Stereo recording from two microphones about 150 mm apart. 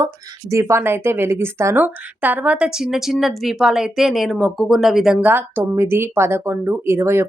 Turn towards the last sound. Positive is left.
turn(degrees=-15)  # may be behind; listen again after turning